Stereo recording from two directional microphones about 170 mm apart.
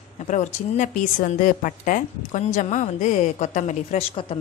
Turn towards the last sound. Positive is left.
turn(degrees=45)  # may be behind; listen again after turning